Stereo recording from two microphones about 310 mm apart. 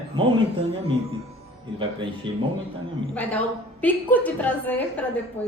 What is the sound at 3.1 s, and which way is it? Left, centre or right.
A woman's voice, centre.